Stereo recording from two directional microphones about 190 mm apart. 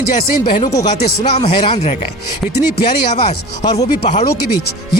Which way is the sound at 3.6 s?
20° left (ahead or behind).